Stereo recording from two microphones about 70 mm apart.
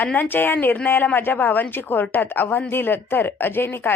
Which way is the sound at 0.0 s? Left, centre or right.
Left.